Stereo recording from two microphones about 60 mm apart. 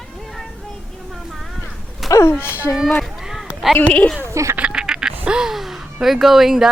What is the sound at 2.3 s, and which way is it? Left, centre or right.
Speech, left.